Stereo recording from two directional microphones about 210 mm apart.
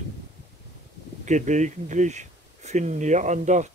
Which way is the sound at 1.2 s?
35° right (ahead or behind).